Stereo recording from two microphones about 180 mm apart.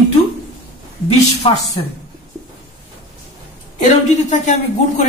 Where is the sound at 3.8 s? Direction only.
40° left (ahead or behind).